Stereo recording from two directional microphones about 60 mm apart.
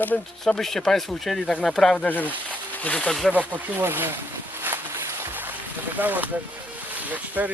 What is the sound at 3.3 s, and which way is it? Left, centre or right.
Speech, right.